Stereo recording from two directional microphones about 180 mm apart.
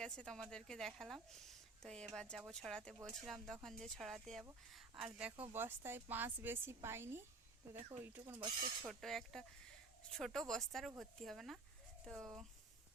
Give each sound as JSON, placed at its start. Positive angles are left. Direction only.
{"t": 0.0, "sound": "a woman's voice", "side_deg": 5}
{"t": 8.9, "sound": "a woman's voice", "side_deg": 0}